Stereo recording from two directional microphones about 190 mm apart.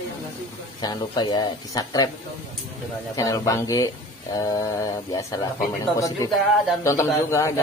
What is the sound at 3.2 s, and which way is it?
A man's voice, 15° left (ahead or behind).